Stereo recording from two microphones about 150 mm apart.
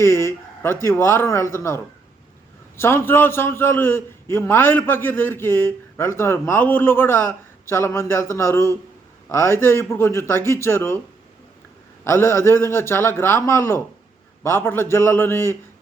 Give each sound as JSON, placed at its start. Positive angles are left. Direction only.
{"t": 0.0, "sound": "a man's voice", "side_deg": 15}
{"t": 12.0, "sound": "a man's voice", "side_deg": 15}